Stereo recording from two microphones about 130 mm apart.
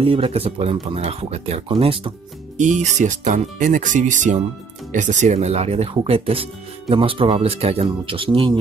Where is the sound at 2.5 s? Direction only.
65° right (ahead or behind).